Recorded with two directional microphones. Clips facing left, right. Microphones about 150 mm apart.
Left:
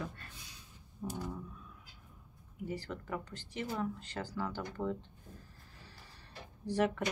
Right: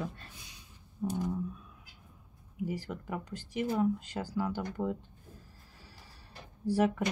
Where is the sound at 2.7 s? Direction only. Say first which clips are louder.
Even; 10° right (ahead or behind).